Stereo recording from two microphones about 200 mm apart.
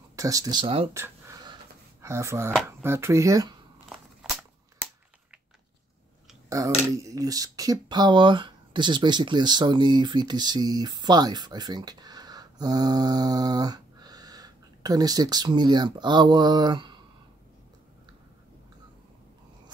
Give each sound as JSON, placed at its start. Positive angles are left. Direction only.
{"t": 0.1, "sound": "speech", "side_deg": -15}
{"t": 0.9, "sound": "a sound", "side_deg": -15}
{"t": 2.8, "sound": "speech", "side_deg": -15}
{"t": 4.2, "sound": "cap gun", "side_deg": 0}
{"t": 6.5, "sound": "speech", "side_deg": -15}